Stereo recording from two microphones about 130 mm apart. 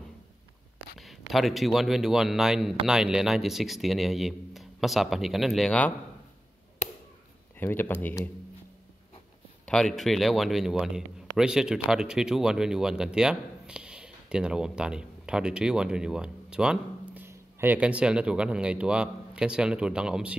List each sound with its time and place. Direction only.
0.9 s a man's voice: centre (ahead or behind)
7.5 s speech: 15° left (ahead or behind)
9.7 s speech: 5° left (ahead or behind)